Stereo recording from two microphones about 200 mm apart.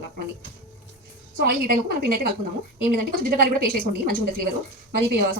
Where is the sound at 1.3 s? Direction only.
50° right (ahead or behind).